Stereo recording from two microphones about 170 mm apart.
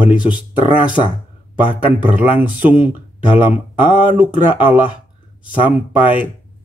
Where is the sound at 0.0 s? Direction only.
10° right (ahead or behind).